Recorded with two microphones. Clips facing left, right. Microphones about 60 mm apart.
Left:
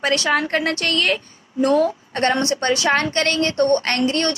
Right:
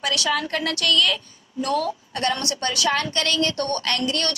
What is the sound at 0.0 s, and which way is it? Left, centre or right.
A woman's voice, left.